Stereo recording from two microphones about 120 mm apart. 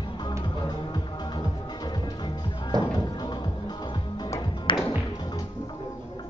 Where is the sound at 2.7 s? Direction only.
35° right (ahead or behind).